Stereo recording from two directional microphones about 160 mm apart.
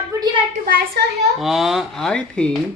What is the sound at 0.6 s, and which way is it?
Speech, 65° right (ahead or behind).